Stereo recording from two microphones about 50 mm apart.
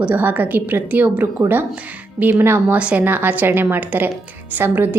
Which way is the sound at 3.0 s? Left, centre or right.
Right.